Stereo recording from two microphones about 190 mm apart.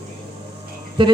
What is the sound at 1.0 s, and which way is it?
Speech, 25° right (ahead or behind).